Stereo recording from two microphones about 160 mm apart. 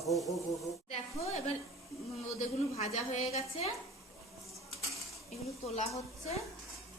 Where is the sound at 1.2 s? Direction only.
40° left (ahead or behind).